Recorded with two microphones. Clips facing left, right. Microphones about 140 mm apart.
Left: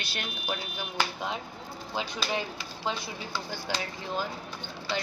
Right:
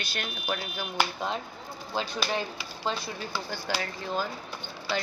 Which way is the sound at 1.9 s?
15° left (ahead or behind).